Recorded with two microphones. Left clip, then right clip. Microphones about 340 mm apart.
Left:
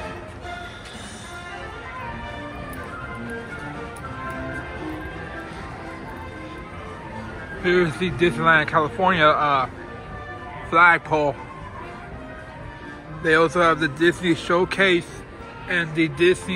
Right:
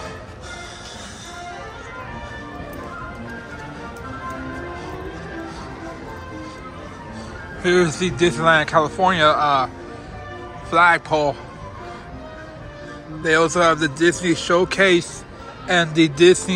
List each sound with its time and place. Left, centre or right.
7.6 s speech: centre
10.7 s speech: centre
13.2 s speech: centre